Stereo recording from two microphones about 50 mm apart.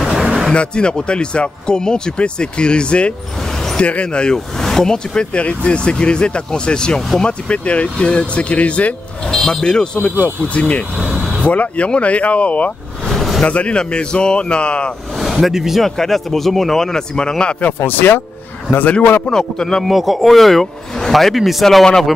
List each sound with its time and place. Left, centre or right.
0.0 s vehicle: centre
0.5 s speech: centre
4.6 s speech: centre; by 8.9 s left
9.3 s speech: centre; by 12.7 s left
13.1 s vehicle: centre
13.4 s speech: left
15.3 s speech: centre
15.8 s speech: centre
17.7 s a man's voice: left
19.3 s speech: centre
19.8 s speech: centre